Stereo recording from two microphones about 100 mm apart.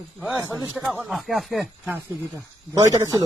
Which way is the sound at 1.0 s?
Centre (ahead or behind).